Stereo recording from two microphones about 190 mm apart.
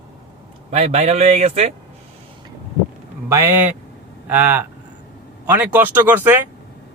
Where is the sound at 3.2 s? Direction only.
15° right (ahead or behind).